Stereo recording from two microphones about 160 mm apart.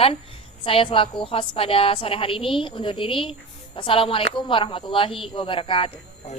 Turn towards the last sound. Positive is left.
turn(degrees=40)  # may be behind; listen again after turning